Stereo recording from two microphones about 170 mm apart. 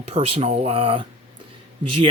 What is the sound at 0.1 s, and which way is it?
Speech, 35° right (ahead or behind).